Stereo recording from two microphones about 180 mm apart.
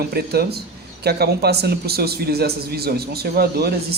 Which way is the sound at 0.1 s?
60° right (ahead or behind).